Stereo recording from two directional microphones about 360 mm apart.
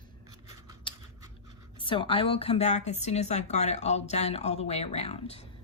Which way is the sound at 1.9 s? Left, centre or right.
Centre.